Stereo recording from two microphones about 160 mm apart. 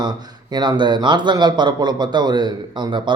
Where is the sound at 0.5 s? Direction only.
25° right (ahead or behind).